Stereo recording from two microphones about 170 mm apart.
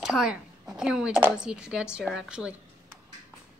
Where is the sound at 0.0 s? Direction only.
5° right (ahead or behind).